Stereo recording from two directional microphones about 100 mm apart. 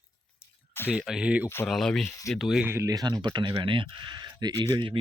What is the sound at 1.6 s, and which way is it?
Speech, 5° left (ahead or behind).